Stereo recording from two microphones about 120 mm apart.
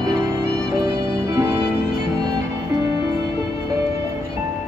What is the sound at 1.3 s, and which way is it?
Music, 20° right (ahead or behind).